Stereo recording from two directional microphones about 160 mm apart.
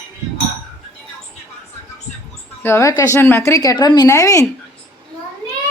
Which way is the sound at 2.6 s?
15° left (ahead or behind).